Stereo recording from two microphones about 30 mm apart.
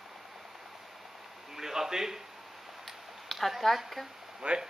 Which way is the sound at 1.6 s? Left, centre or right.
Centre.